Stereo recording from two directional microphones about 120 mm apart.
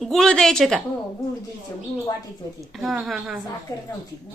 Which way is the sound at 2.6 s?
Centre (ahead or behind).